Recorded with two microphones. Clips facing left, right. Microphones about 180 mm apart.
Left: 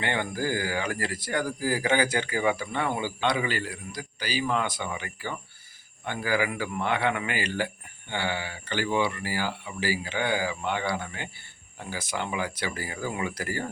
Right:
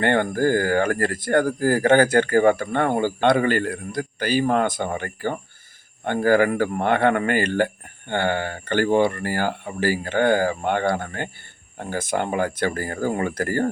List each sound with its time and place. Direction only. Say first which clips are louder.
0.0 s speech: right 9 dB; 50° right (ahead or behind)